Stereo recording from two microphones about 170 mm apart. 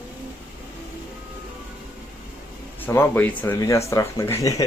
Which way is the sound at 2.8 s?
10° left (ahead or behind).